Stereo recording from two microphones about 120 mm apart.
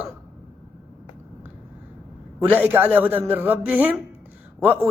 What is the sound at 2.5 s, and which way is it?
A man's voice, 15° right (ahead or behind).